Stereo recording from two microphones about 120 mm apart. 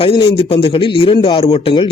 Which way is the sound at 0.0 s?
50° left (ahead or behind).